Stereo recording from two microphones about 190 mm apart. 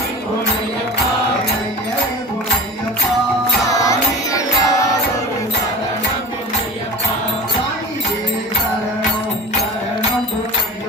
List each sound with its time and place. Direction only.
3.7 s music: 15° left (ahead or behind)